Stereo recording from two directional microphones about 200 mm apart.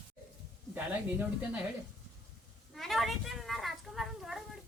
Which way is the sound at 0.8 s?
10° right (ahead or behind).